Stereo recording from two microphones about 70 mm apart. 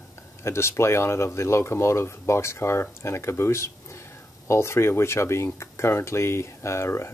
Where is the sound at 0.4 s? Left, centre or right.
Left.